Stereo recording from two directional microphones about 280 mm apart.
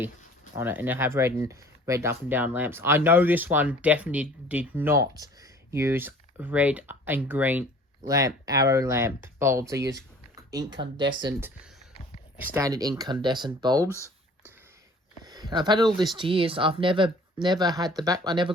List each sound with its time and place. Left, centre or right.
0.5 s speech: centre
13.8 s a sound: centre
15.2 s speech: centre